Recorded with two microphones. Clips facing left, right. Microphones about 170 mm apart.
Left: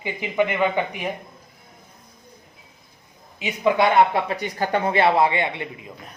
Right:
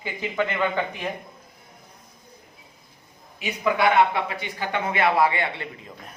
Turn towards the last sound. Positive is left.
turn(degrees=20)  # may be behind; listen again after turning